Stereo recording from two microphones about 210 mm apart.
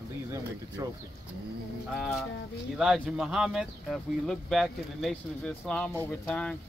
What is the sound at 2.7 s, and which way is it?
Speech, centre (ahead or behind).